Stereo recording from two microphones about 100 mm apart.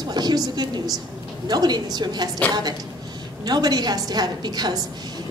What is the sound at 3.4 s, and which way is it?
A woman's voice, 45° right (ahead or behind).